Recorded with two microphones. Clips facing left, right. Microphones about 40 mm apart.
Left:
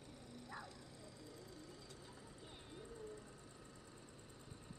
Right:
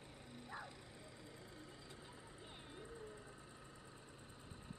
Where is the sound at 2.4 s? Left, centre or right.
Centre.